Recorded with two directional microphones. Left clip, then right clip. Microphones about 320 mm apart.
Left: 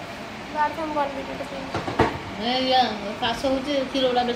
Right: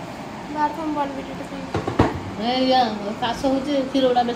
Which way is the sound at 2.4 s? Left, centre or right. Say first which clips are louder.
Right 2 dB; right.